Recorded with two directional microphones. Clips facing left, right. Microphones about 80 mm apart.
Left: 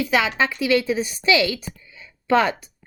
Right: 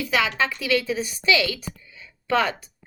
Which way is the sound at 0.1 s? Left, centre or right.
Left.